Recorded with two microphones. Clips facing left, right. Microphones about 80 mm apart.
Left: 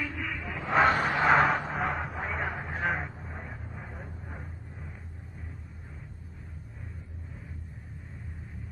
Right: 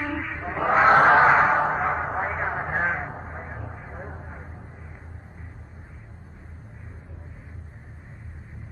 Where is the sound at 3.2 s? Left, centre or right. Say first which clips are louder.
Right 5 dB; right.